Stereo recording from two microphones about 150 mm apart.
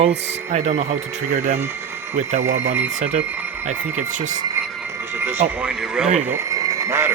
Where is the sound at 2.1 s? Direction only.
60° right (ahead or behind).